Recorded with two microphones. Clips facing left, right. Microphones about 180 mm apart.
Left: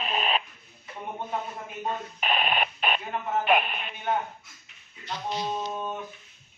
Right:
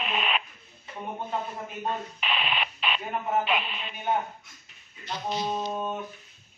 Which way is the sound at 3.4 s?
55° left (ahead or behind).